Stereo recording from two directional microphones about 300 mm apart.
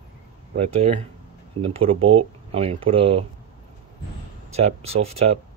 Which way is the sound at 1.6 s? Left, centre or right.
Centre.